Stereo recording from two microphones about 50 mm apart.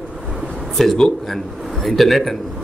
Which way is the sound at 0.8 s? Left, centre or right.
Centre.